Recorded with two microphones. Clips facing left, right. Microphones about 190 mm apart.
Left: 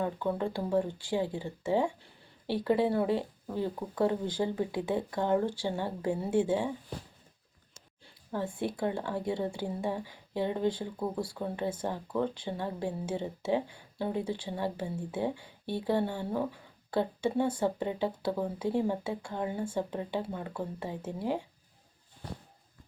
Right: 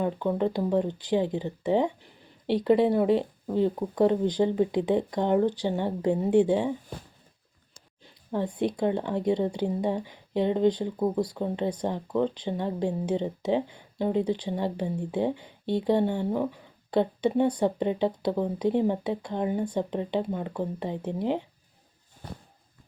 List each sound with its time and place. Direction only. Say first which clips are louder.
0.0 s speech: right 5 dB; 20° right (ahead or behind)
8.0 s a sound: right 5 dB; 20° right (ahead or behind)
8.5 s speech: right 7 dB; 20° right (ahead or behind)